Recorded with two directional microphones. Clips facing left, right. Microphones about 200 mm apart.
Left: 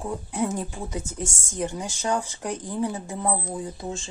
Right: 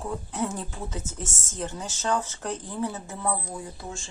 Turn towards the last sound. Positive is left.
turn(degrees=20)  # may be behind; listen again after turning